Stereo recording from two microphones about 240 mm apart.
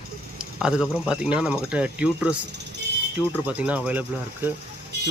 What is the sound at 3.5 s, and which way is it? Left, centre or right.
Speech, centre.